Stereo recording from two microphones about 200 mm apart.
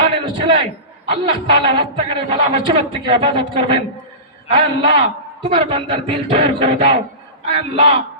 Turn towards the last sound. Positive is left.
turn(degrees=-30)  # may be behind; listen again after turning